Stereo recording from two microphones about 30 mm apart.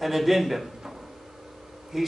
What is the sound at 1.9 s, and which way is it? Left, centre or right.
Bee, centre.